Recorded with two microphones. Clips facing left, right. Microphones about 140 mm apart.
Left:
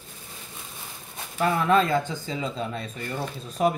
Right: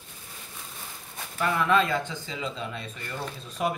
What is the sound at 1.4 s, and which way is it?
Speech, 35° left (ahead or behind).